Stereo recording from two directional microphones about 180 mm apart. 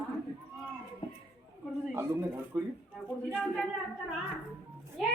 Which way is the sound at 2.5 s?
15° right (ahead or behind).